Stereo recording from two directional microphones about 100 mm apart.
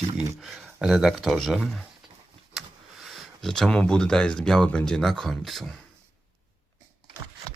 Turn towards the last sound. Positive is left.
turn(degrees=0)  # may be behind; listen again after turning